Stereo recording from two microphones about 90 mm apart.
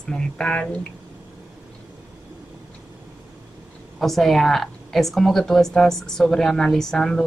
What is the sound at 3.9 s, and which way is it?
A woman's voice, centre (ahead or behind).